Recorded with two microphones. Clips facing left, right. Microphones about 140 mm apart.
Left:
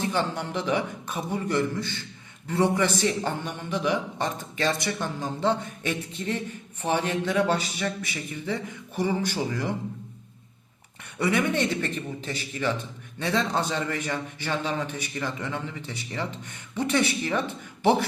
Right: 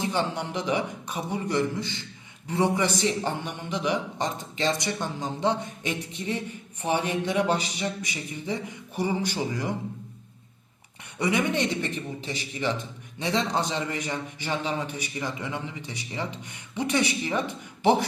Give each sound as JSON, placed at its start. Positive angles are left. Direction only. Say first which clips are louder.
{"t": 0.0, "sound": "a man's voice", "louder": "even", "side_deg": -15}
{"t": 11.2, "sound": "a man's voice", "louder": "left 1 dB", "side_deg": -15}